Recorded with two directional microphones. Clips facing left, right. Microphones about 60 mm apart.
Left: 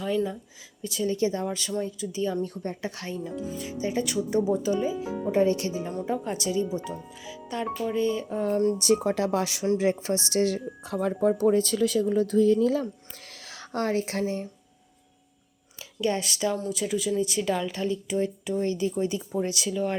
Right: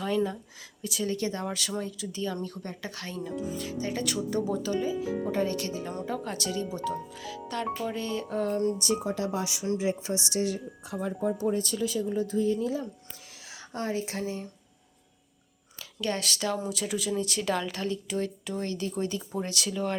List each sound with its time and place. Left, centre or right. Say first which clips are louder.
0.8 s a woman's voice: left 4 dB; centre
1.5 s a woman's voice: left 3 dB; centre
2.2 s speech: left 5 dB; left; by 4.2 s centre
4.3 s speech: left 5 dB; centre
7.2 s music: left 1 dB; centre
7.9 s speech: left 6 dB; centre
8.4 s speech: left 5 dB; left
8.8 s speech: left 6 dB; left
13.4 s speech: left 5 dB; left
16.0 s a woman's voice: left 4 dB; centre